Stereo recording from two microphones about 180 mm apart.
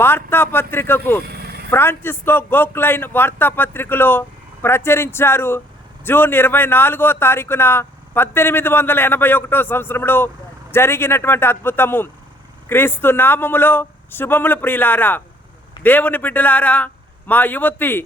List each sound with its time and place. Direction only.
0.0 s speech: 10° left (ahead or behind)
1.3 s vehicle: 60° right (ahead or behind)
1.7 s speech: 10° left (ahead or behind)